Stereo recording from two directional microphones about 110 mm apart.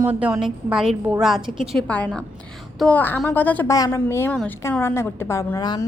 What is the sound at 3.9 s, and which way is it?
A woman's voice, 20° left (ahead or behind).